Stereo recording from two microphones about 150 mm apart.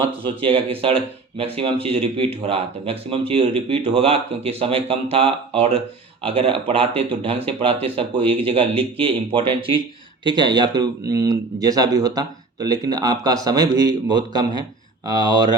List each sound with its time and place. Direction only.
0.0 s speech: 35° right (ahead or behind)